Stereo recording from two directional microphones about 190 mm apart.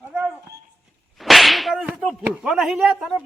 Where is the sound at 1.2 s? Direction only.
Centre (ahead or behind).